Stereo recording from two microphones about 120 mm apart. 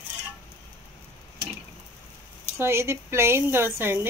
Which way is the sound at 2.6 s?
20° right (ahead or behind).